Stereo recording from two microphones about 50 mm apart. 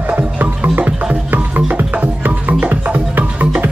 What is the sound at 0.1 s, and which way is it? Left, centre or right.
Music, right.